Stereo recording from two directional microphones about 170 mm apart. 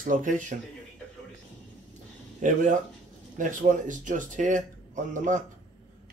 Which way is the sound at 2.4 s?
45° right (ahead or behind).